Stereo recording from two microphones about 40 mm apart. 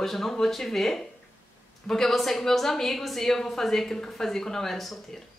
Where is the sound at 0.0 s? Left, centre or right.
Centre.